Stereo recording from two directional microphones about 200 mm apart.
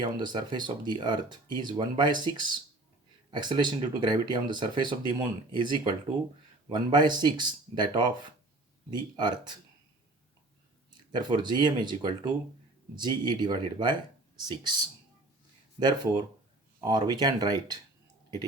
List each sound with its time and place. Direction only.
0.0 s speech: 20° right (ahead or behind)
11.1 s speech: 20° right (ahead or behind)